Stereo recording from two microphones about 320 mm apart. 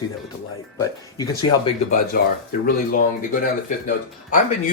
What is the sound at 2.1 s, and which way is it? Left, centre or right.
Speech, left.